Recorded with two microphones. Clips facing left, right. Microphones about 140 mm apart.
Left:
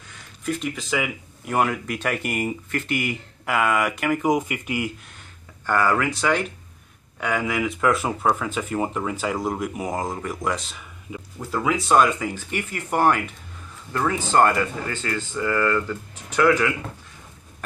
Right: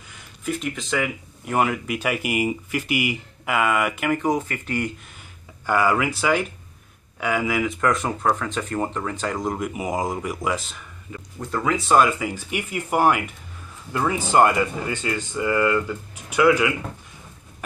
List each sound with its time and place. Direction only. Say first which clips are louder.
0.1 s speech: even; centre (ahead or behind)
4.3 s speech: left 1 dB; 15° left (ahead or behind)
5.7 s speech: right 1 dB; 10° right (ahead or behind)